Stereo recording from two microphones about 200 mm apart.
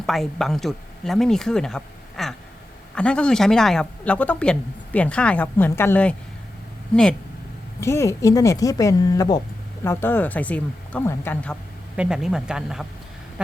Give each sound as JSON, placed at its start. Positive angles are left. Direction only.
{"t": 0.0, "sound": "a woman's voice", "side_deg": 0}
{"t": 11.9, "sound": "speech", "side_deg": -5}